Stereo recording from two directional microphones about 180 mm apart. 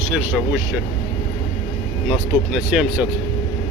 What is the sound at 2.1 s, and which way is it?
Speech, 5° right (ahead or behind).